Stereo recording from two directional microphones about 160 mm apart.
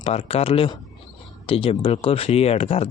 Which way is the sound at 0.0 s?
40° left (ahead or behind).